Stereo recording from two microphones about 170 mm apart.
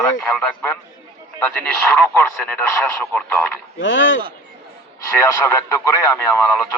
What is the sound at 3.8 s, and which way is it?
Speech, 90° left.